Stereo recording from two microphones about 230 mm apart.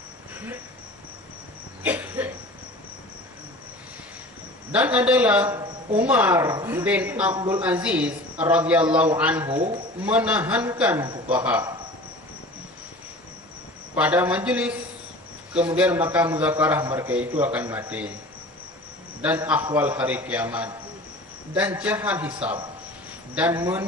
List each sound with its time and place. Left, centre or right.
1.8 s cough: centre
4.7 s a man's voice: centre
7.3 s a man's voice: centre
7.6 s a man's voice: centre
13.9 s a man's voice: centre
19.2 s a man's voice: centre